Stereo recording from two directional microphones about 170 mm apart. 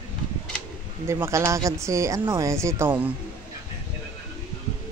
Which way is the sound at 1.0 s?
15° right (ahead or behind).